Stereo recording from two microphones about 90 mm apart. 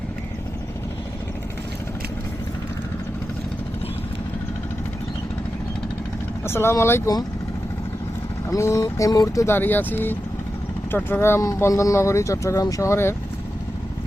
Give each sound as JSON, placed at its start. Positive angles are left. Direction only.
{"t": 6.4, "sound": "speech", "side_deg": 25}
{"t": 8.4, "sound": "speech", "side_deg": 35}
{"t": 9.5, "sound": "speech", "side_deg": 20}